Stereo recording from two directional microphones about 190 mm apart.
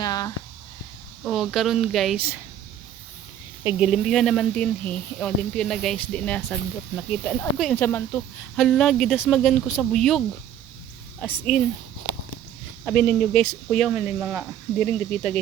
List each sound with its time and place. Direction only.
0.0 s a sound: 20° left (ahead or behind)
1.2 s speech: centre (ahead or behind)
3.6 s speech: 5° right (ahead or behind)
13.0 s speech: 5° left (ahead or behind)